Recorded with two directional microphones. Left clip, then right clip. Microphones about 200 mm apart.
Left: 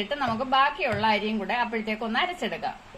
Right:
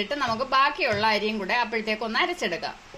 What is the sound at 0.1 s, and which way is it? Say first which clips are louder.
A woman's voice: even; 35° right (ahead or behind).